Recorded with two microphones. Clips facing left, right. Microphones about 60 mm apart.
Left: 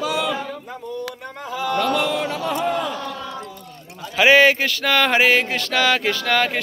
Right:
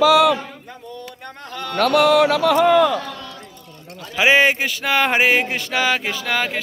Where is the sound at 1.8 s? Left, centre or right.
Right.